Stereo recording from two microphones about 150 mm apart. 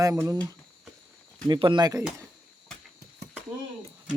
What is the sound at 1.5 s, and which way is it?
Speech, 30° right (ahead or behind).